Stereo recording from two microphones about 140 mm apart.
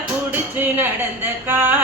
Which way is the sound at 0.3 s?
15° right (ahead or behind).